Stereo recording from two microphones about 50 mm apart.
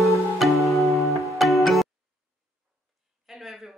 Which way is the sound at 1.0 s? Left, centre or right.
Left.